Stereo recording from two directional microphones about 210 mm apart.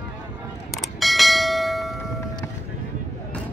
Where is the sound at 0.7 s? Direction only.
Centre (ahead or behind).